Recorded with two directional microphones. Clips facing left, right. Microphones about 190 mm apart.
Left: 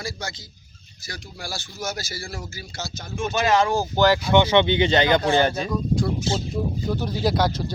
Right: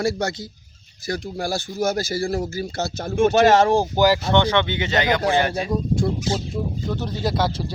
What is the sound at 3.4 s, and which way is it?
Speech, 40° right (ahead or behind).